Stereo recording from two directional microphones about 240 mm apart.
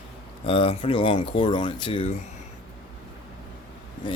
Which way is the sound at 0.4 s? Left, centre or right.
Left.